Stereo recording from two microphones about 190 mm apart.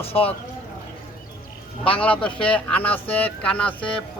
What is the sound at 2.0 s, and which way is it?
Speech, 5° left (ahead or behind).